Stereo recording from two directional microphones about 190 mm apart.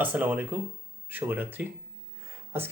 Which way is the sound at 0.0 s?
10° right (ahead or behind).